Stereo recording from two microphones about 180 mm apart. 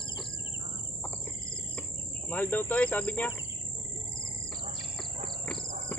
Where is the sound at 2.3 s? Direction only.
10° left (ahead or behind).